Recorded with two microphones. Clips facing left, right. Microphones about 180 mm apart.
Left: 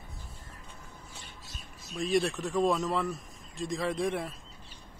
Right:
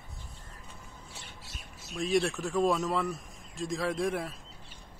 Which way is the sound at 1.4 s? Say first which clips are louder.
Even; 75° right (ahead or behind).